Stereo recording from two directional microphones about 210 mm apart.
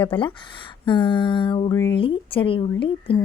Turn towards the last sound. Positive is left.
turn(degrees=25)  # may be behind; listen again after turning